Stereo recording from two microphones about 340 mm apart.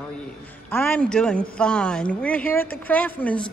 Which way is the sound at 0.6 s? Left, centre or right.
Centre.